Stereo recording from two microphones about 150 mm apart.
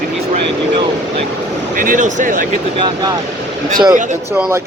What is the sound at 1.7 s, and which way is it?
Speech, 60° right (ahead or behind).